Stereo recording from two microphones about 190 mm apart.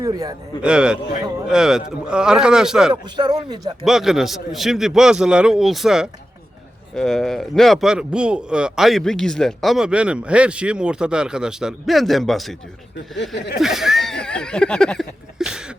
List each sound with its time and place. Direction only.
0.0 s speech: 20° right (ahead or behind)
0.6 s speech: 5° right (ahead or behind)
2.9 s speech: 20° right (ahead or behind)
3.8 s speech: centre (ahead or behind)
13.3 s speech: 65° left (ahead or behind)
13.6 s a sound: centre (ahead or behind)